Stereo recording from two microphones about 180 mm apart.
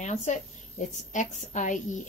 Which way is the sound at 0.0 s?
40° left (ahead or behind).